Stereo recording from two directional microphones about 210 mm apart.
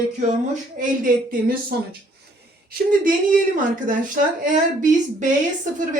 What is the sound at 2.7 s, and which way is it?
Speech, 40° right (ahead or behind).